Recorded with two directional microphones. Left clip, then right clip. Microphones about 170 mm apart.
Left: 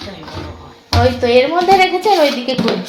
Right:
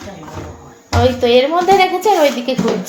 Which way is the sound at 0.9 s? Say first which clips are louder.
Even; centre (ahead or behind).